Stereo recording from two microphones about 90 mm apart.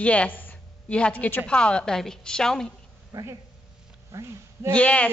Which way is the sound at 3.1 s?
35° right (ahead or behind).